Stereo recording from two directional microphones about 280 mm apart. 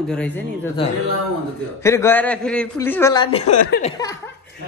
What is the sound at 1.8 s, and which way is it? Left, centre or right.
A man's voice, centre.